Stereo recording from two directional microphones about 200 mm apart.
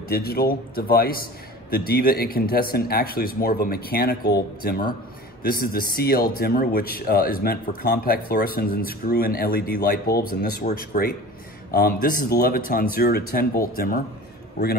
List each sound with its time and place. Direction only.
0.1 s speech: 50° left (ahead or behind)